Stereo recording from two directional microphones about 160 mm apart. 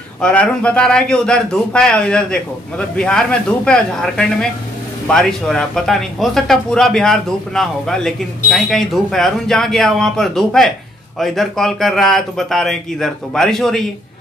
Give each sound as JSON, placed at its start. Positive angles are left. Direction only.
{"t": 0.2, "sound": "speech", "side_deg": 5}